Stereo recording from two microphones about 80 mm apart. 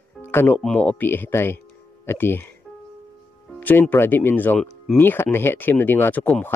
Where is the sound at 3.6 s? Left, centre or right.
Left.